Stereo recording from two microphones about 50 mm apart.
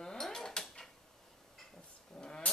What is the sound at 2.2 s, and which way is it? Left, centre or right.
Vehicle, centre.